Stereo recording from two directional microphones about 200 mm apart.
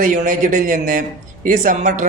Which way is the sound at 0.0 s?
40° right (ahead or behind).